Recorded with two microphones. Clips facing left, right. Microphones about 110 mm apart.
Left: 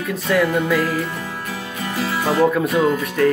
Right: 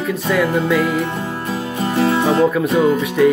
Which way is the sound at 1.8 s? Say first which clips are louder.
Right 7 dB; 25° right (ahead or behind).